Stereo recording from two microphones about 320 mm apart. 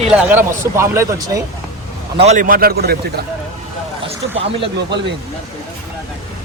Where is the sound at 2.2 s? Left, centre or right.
Right.